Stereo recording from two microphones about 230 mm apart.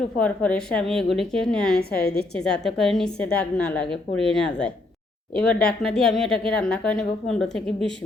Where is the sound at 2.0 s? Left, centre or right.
Left.